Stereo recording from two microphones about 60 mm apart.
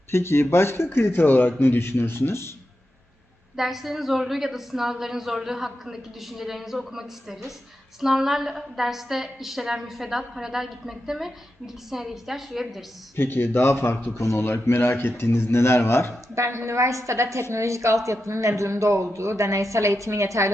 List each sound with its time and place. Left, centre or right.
0.1 s a man's voice: left
3.5 s a woman's voice: centre
13.1 s a man's voice: left
16.3 s a woman's voice: right